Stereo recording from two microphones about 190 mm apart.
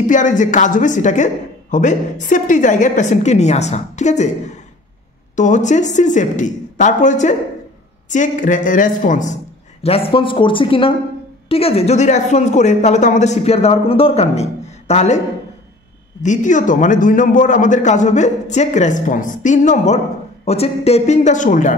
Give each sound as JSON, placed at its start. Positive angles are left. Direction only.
{"t": 0.0, "sound": "a woman's voice", "side_deg": 40}
{"t": 9.8, "sound": "speech", "side_deg": 30}
{"t": 16.2, "sound": "speech", "side_deg": 40}